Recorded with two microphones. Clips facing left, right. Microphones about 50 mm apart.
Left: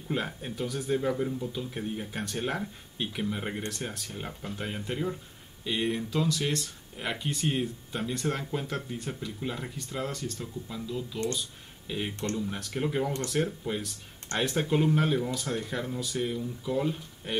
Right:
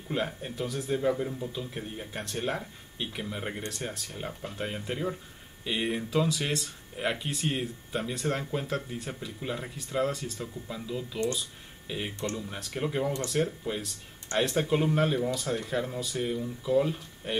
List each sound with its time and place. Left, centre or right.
0.1 s speech: centre
13.0 s speech: centre
13.3 s speech: centre